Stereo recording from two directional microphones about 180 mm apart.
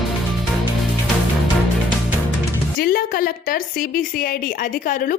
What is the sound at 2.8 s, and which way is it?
A woman's voice, 55° left (ahead or behind).